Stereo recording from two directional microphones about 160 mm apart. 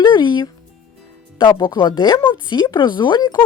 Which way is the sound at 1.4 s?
30° left (ahead or behind).